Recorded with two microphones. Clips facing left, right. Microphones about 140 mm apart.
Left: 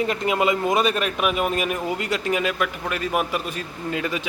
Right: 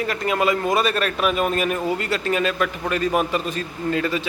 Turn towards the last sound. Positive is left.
turn(degrees=10)  # may be behind; listen again after turning